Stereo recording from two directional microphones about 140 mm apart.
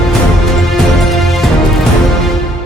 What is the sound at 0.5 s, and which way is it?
Music, centre (ahead or behind).